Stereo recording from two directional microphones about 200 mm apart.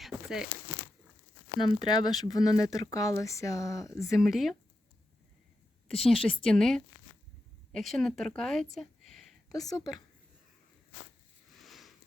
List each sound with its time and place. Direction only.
0.0 s zipper: 5° right (ahead or behind)
1.5 s speech: 20° left (ahead or behind)
4.1 s speech: centre (ahead or behind)
6.0 s speech: 5° left (ahead or behind)
8.7 s a sound: centre (ahead or behind)
9.5 s speech: 20° left (ahead or behind)
11.6 s a sound: centre (ahead or behind)